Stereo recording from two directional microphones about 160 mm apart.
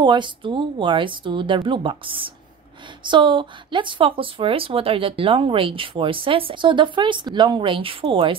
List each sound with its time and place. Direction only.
0.0 s speech: 30° right (ahead or behind)